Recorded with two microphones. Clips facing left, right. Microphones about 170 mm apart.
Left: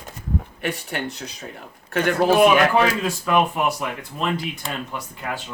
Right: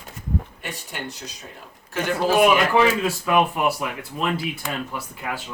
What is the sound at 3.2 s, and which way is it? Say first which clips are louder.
Speech: even; 5° right (ahead or behind).